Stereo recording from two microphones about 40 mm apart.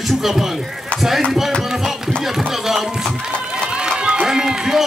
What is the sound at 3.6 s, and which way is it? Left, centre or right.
Run, right.